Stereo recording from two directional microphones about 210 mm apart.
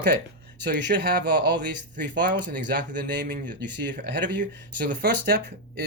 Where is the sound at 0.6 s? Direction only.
50° right (ahead or behind).